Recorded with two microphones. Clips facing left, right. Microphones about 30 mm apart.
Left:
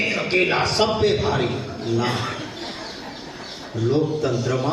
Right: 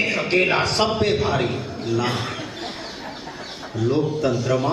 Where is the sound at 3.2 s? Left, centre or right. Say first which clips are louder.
Right 1 dB; centre.